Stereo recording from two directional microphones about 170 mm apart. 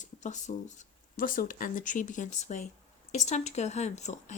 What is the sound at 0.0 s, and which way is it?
Speech, 45° left (ahead or behind).